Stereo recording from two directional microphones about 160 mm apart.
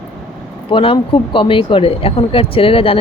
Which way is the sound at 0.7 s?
35° left (ahead or behind).